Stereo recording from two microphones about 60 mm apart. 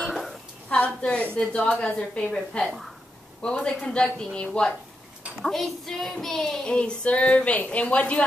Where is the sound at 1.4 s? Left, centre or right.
Centre.